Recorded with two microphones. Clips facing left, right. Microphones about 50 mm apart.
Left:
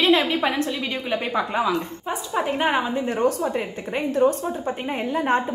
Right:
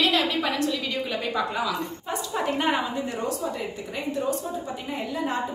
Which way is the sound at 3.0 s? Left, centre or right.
Left.